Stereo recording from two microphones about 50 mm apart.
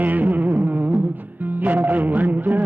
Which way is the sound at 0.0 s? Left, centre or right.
Right.